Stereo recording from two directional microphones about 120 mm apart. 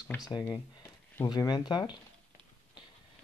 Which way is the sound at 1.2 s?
35° left (ahead or behind).